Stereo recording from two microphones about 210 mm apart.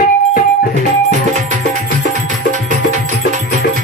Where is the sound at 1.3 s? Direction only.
35° right (ahead or behind).